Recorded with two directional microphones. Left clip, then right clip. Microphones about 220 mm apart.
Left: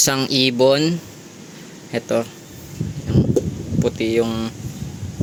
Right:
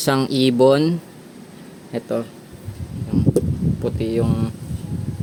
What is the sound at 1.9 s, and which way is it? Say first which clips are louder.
Speech: left 4 dB; centre (ahead or behind).